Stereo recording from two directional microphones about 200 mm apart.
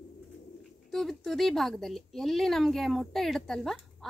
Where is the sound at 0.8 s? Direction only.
Centre (ahead or behind).